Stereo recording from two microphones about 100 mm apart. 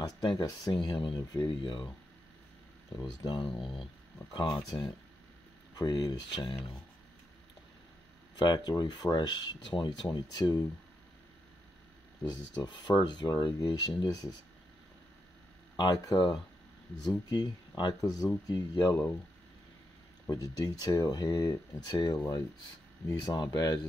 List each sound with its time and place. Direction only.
0.0 s speech: 45° left (ahead or behind)
3.0 s speech: 45° left (ahead or behind)
3.5 s speech: centre (ahead or behind)
4.3 s speech: 50° left (ahead or behind)
8.4 s speech: 45° left (ahead or behind)
12.2 s speech: 45° left (ahead or behind)
15.7 s speech: 40° left (ahead or behind)
17.3 s speech: 45° left (ahead or behind)
20.2 s speech: 35° left (ahead or behind)